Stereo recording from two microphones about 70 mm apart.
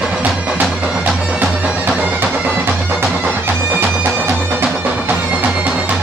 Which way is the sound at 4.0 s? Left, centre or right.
Right.